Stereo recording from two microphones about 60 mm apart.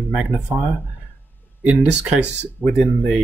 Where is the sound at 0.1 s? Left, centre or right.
Centre.